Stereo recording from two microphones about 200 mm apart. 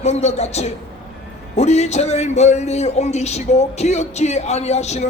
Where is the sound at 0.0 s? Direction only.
35° left (ahead or behind).